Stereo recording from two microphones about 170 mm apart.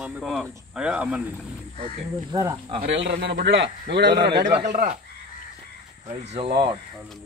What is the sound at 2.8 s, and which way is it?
A man's voice, 80° right.